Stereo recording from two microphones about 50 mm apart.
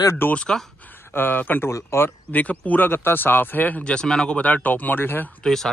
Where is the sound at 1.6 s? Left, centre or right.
Left.